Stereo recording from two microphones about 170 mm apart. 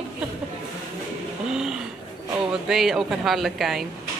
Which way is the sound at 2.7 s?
Centre (ahead or behind).